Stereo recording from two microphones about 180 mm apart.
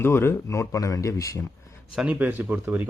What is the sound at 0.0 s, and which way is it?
Speech, 15° left (ahead or behind).